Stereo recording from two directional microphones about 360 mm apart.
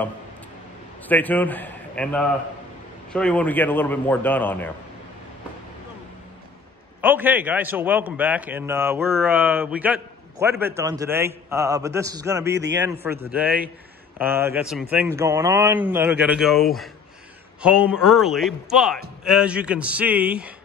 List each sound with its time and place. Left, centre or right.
1.0 s a man's voice: centre
7.0 s a man's voice: centre
12.4 s a man's voice: right
13.0 s a man's voice: centre